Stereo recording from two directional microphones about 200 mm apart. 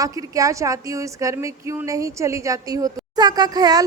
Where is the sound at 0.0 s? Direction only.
15° right (ahead or behind).